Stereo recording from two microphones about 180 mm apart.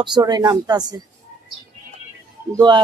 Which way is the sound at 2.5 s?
25° right (ahead or behind).